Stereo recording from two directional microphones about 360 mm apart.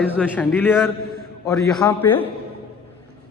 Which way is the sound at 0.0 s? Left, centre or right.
Centre.